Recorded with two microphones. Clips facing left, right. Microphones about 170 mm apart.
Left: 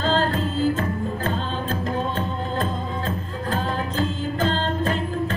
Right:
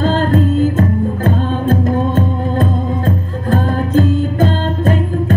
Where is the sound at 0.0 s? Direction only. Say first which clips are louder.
Right 8 dB; 50° right (ahead or behind).